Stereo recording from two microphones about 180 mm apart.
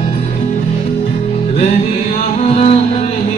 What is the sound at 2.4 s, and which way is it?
Music, 35° left (ahead or behind).